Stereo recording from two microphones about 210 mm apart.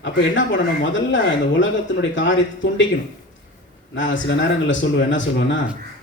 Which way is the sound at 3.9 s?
60° left (ahead or behind).